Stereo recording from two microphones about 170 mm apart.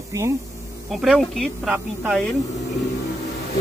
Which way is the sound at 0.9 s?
Centre (ahead or behind).